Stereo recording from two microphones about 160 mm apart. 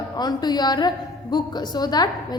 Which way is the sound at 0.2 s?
25° left (ahead or behind).